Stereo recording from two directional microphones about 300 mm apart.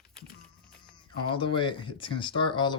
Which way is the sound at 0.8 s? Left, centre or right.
Centre.